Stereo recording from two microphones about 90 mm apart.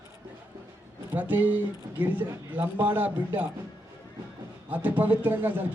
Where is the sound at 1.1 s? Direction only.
20° right (ahead or behind).